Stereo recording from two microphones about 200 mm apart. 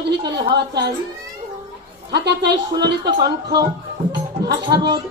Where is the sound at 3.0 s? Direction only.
20° right (ahead or behind).